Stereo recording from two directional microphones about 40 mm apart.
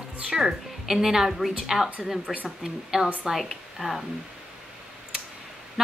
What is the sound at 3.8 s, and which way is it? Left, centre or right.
Speech, centre.